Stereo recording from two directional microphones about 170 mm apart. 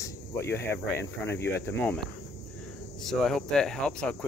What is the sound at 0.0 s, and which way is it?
Speech, 15° left (ahead or behind).